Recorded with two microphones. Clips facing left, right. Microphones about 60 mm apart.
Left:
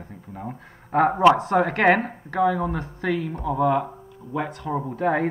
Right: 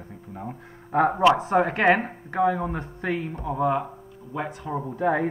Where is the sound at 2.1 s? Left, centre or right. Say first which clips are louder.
Left 1 dB; right.